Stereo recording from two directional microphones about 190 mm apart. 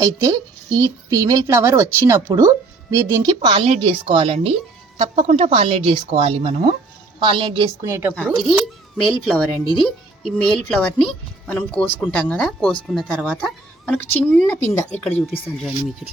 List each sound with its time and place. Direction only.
0.0 s a woman's voice: 15° right (ahead or behind)
7.9 s a woman's voice: 15° right (ahead or behind)
8.4 s a child's voice: centre (ahead or behind)